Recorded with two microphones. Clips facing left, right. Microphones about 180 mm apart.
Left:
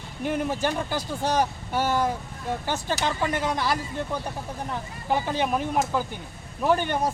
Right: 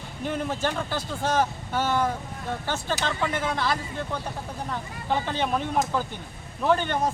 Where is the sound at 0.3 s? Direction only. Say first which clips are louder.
Left 2 dB; 10° left (ahead or behind).